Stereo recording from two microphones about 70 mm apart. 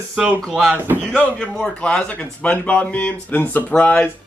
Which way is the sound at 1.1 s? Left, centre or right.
Centre.